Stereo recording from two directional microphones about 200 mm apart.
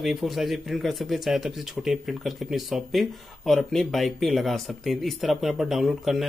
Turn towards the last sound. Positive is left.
turn(degrees=0)  # may be behind; listen again after turning